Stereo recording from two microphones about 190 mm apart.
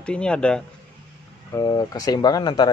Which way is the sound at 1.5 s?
20° left (ahead or behind).